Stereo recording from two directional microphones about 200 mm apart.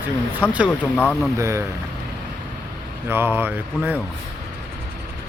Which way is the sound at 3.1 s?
10° right (ahead or behind).